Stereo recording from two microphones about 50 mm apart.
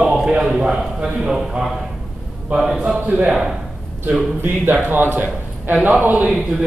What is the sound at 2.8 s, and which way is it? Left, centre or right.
Speech, right.